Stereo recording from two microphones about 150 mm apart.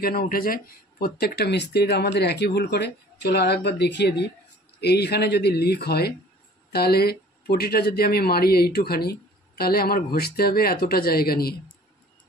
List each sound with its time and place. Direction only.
0.0 s speech: 80° left
4.7 s speech: 90° left